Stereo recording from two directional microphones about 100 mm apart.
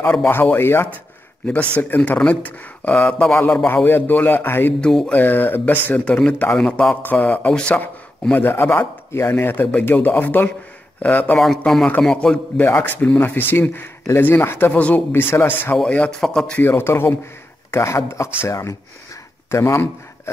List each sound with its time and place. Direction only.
0.3 s speech: 20° left (ahead or behind)
2.0 s speech: 10° left (ahead or behind)
3.6 s speech: 20° left (ahead or behind)
11.3 s a man's voice: 5° left (ahead or behind)
12.5 s speech: 20° left (ahead or behind)
16.5 s speech: 20° left (ahead or behind)